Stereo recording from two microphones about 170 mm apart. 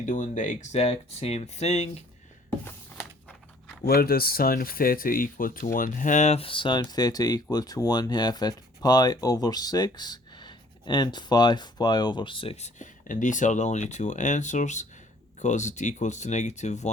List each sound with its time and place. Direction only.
0.0 s speech: 50° left (ahead or behind)
3.8 s speech: 65° left (ahead or behind); by 16.9 s 45° left (ahead or behind)